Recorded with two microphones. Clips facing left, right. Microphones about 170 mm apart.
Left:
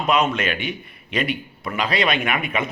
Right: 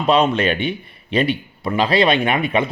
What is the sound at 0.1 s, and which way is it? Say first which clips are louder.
Speech: right 5 dB; 30° right (ahead or behind).